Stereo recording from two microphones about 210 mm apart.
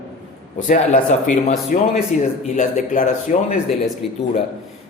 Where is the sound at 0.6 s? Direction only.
35° left (ahead or behind).